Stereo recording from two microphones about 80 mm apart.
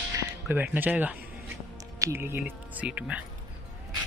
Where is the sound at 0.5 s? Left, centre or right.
Right.